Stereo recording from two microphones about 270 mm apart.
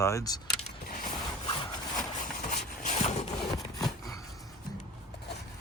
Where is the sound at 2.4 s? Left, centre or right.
Left.